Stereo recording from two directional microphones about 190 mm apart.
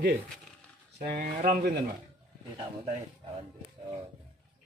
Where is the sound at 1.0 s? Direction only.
45° right (ahead or behind).